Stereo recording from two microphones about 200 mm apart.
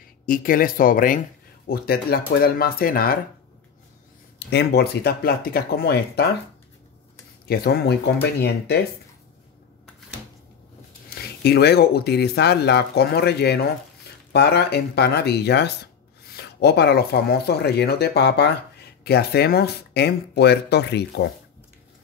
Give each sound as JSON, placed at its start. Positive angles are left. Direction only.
{"t": 0.3, "sound": "speech", "side_deg": 45}
{"t": 4.4, "sound": "speech", "side_deg": 55}
{"t": 7.4, "sound": "speech", "side_deg": 50}
{"t": 11.1, "sound": "speech", "side_deg": 55}